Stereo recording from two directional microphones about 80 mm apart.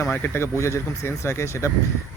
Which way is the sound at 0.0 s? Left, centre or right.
Left.